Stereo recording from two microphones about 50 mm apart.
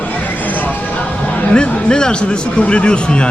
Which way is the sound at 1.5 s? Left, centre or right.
Centre.